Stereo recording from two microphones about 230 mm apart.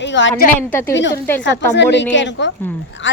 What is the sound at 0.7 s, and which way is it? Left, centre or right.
Speech, centre.